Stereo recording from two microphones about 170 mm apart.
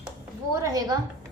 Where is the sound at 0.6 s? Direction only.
20° right (ahead or behind).